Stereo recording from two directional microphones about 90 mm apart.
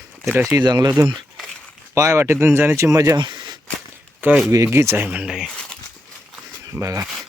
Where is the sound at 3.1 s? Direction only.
55° right (ahead or behind).